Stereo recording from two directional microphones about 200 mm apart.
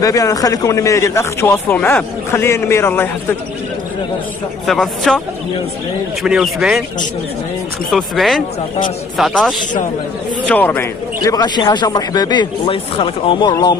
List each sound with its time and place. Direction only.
0.0 s speech: 15° left (ahead or behind)
4.6 s speech: 5° left (ahead or behind)
6.2 s speech: centre (ahead or behind)
7.9 s a man's voice: centre (ahead or behind); by 13.7 s 20° left (ahead or behind)